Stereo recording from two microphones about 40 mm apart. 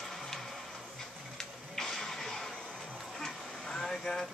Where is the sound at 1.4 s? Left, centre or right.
Centre.